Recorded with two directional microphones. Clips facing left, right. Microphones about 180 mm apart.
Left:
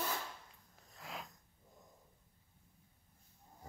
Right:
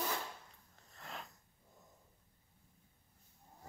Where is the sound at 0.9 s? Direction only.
Centre (ahead or behind).